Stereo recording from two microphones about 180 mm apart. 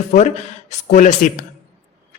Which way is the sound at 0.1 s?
40° left (ahead or behind).